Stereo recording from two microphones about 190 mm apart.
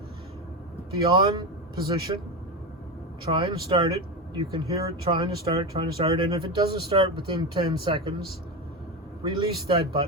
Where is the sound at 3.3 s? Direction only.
25° right (ahead or behind).